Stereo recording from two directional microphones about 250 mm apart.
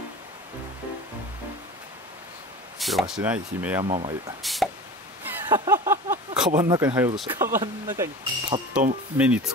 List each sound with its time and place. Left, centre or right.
2.8 s speech: centre
3.8 s speech: right
4.4 s a sound: centre
7.2 s speech: centre